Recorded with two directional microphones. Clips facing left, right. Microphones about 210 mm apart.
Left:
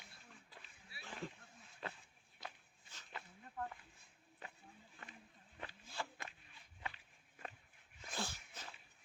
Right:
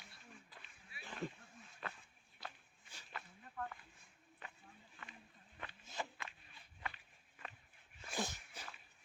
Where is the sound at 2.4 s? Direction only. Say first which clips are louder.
Even; 20° left (ahead or behind).